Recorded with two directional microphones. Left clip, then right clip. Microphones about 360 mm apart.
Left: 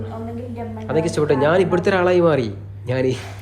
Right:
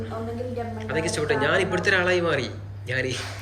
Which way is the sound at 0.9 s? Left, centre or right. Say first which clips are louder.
Left 6 dB; centre.